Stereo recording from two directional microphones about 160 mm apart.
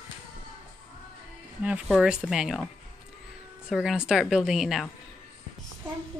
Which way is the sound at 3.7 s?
5° right (ahead or behind).